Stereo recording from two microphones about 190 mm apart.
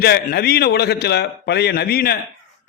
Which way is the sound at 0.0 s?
55° left (ahead or behind).